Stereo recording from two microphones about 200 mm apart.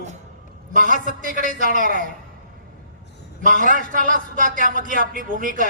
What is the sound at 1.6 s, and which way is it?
Speech, 40° right (ahead or behind).